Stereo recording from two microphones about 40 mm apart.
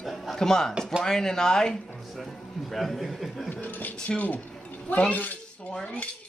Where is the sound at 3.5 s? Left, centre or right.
Left.